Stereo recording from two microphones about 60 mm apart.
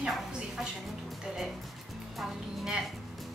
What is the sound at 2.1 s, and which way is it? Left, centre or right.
Speech, centre.